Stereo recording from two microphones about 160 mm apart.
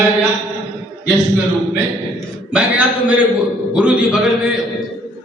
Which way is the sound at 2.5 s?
5° right (ahead or behind).